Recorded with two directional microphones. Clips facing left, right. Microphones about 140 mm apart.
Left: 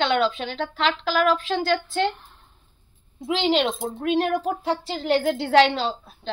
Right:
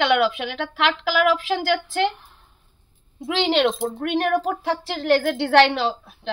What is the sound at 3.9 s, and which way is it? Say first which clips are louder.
A woman's voice: right 1 dB; 70° right (ahead or behind).